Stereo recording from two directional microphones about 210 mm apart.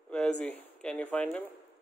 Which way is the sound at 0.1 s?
5° left (ahead or behind).